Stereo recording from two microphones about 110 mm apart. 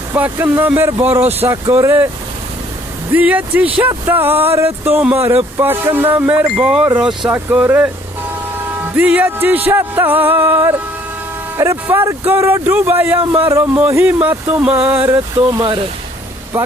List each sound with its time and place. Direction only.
0.1 s speech: 25° right (ahead or behind)
1.0 s music: 15° right (ahead or behind)
1.7 s speech: 20° right (ahead or behind)
3.1 s music: 15° right (ahead or behind)
3.8 s speech: 20° right (ahead or behind); by 7.3 s centre (ahead or behind)
7.3 s music: 15° right (ahead or behind)
11.5 s speech: 25° right (ahead or behind)
13.4 s music: 20° right (ahead or behind)
16.5 s speech: 20° right (ahead or behind)